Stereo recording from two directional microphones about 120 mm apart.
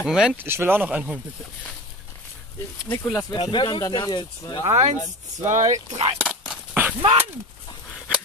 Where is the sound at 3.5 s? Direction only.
40° left (ahead or behind).